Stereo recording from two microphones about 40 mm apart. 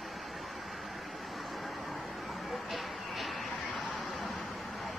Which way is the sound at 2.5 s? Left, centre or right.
Centre.